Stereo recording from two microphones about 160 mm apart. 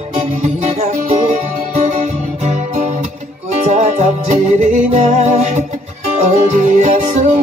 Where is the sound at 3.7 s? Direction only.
45° right (ahead or behind).